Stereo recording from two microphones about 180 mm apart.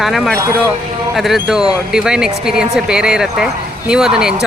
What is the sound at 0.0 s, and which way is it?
Speech, centre (ahead or behind).